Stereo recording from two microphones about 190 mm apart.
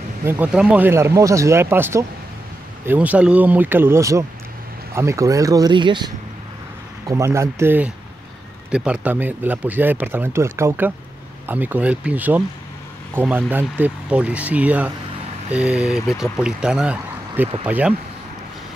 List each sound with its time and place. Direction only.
0.2 s speech: 10° right (ahead or behind)